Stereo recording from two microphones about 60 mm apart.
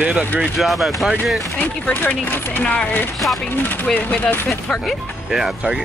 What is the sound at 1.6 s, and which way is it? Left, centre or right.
Speech, left.